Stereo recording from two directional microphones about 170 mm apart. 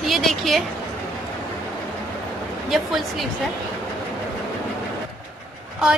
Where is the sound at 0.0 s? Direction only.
Centre (ahead or behind).